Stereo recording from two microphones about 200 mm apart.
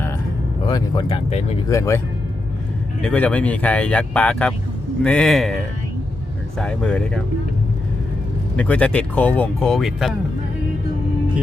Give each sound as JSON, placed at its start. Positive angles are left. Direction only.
{"t": 0.7, "sound": "speech", "side_deg": 20}
{"t": 1.7, "sound": "speech", "side_deg": 15}
{"t": 3.0, "sound": "speech", "side_deg": 5}
{"t": 6.6, "sound": "speech", "side_deg": 5}
{"t": 8.5, "sound": "speech", "side_deg": 5}